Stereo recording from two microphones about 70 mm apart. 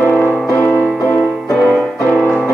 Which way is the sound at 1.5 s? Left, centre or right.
Centre.